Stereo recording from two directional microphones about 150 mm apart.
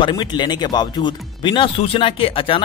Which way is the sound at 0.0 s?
30° left (ahead or behind).